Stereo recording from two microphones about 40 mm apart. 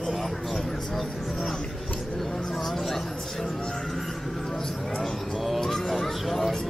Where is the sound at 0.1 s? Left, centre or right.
Centre.